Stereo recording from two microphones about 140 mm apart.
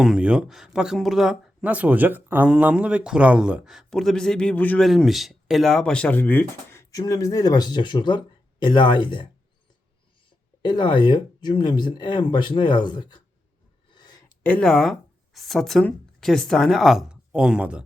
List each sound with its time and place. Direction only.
0.0 s speech: 5° right (ahead or behind); by 4.9 s 10° left (ahead or behind)
4.9 s speech: centre (ahead or behind); by 9.3 s 35° left (ahead or behind)
10.6 s speech: 35° left (ahead or behind)
13.9 s a sound: 30° left (ahead or behind)
14.4 s speech: 5° left (ahead or behind); by 17.8 s 10° right (ahead or behind)